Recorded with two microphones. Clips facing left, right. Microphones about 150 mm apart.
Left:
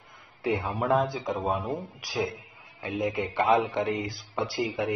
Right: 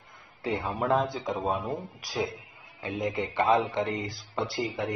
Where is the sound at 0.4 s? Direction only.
Centre (ahead or behind).